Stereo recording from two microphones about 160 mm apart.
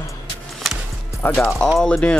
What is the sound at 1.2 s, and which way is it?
Speech, 10° left (ahead or behind).